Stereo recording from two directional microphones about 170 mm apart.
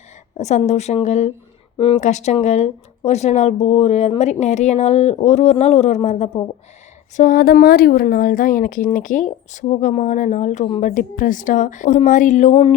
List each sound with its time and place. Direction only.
0.3 s speech: 45° left (ahead or behind)
7.2 s speech: 55° left (ahead or behind)